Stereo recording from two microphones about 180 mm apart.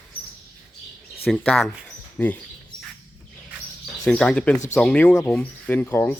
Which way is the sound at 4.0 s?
5° left (ahead or behind).